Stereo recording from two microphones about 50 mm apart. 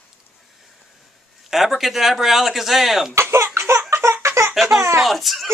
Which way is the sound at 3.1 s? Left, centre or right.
Right.